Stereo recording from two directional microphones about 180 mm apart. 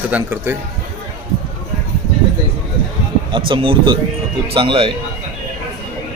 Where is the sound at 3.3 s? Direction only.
30° right (ahead or behind).